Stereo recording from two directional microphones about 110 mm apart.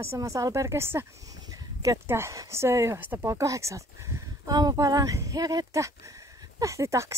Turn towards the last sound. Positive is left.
turn(degrees=-25)  # may be behind; listen again after turning